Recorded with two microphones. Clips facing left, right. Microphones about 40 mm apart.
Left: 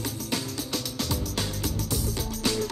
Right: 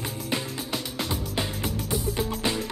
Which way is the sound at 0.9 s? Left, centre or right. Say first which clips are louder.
Right 2 dB; right.